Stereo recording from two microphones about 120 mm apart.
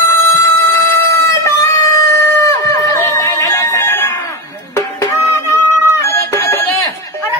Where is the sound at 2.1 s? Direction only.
20° left (ahead or behind).